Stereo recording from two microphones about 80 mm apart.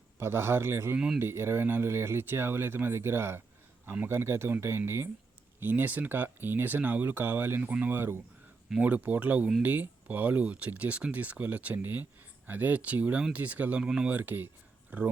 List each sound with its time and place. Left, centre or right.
0.2 s speech: right
0.9 s speech: centre
1.2 s speech: right
5.5 s speech: right